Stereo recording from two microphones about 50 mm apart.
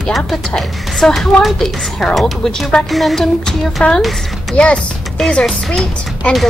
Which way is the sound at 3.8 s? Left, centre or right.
Left.